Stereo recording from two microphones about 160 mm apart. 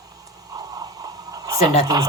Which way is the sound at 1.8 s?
25° right (ahead or behind).